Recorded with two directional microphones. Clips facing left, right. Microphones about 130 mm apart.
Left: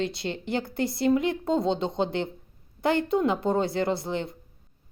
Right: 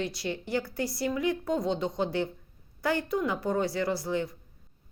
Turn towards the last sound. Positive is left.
turn(degrees=25)  # may be behind; listen again after turning